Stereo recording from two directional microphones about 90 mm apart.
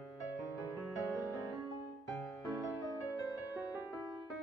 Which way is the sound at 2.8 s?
45° left (ahead or behind).